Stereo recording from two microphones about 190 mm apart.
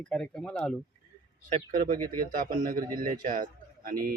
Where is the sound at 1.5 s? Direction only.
40° right (ahead or behind).